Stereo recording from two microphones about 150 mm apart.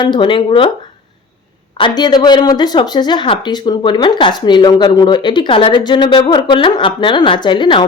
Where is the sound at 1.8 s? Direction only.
30° left (ahead or behind).